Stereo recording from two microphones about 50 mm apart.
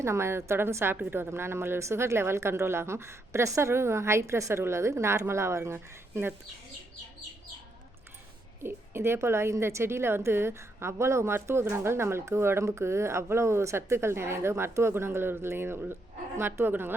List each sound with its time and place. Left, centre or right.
0.0 s a woman's voice: right
4.6 s a woman's voice: right
8.6 s a woman's voice: right